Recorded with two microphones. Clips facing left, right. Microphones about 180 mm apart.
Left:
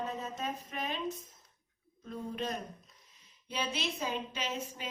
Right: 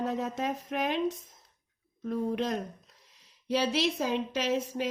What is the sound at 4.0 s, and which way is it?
Speech, 80° right.